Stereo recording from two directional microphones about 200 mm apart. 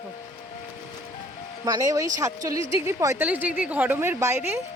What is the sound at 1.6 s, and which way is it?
A woman's voice, 20° right (ahead or behind).